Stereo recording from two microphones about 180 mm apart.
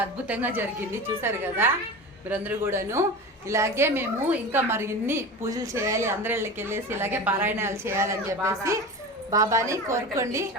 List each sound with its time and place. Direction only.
0.0 s a woman's voice: 10° right (ahead or behind)